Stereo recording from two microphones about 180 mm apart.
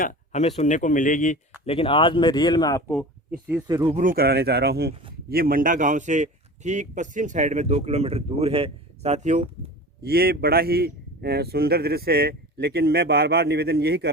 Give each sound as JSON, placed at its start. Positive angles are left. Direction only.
{"t": 0.0, "sound": "speech", "side_deg": 35}
{"t": 1.6, "sound": "speech", "side_deg": 30}
{"t": 3.7, "sound": "speech", "side_deg": -20}
{"t": 3.9, "sound": "a man's voice", "side_deg": -50}
{"t": 10.0, "sound": "a man's voice", "side_deg": -60}